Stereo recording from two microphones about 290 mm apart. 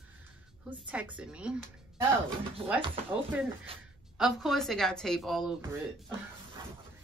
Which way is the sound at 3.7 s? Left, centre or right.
Centre.